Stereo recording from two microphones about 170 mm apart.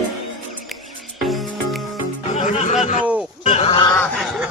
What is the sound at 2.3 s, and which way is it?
Music, 45° left (ahead or behind).